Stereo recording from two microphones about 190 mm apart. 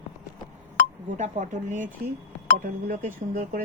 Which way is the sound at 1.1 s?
40° right (ahead or behind).